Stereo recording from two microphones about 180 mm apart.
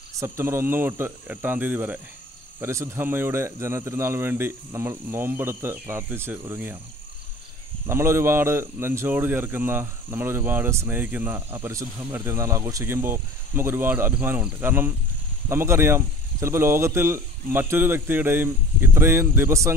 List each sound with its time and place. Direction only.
0.2 s speech: 15° right (ahead or behind)
7.8 s speech: 15° right (ahead or behind)